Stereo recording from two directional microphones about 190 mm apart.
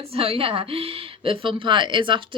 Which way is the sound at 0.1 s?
30° right (ahead or behind).